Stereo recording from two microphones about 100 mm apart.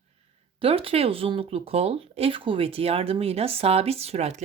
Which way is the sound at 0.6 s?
70° right (ahead or behind).